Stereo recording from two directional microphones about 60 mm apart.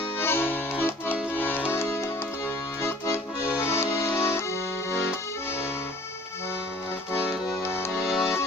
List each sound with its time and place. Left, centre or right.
0.2 s accordion: left
1.4 s music: left
1.7 s music: left
3.7 s music: left
7.6 s music: left
7.9 s music: centre